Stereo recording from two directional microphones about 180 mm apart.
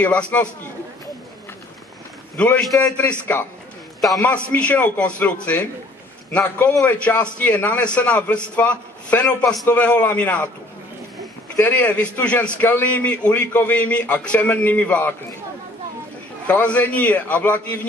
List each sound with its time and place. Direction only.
0.0 s a man's voice: 5° left (ahead or behind)
2.3 s a man's voice: 5° left (ahead or behind)
11.5 s a man's voice: 10° left (ahead or behind)
16.4 s a man's voice: 5° left (ahead or behind)